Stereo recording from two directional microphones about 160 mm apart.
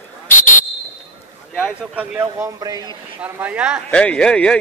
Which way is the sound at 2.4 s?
20° right (ahead or behind).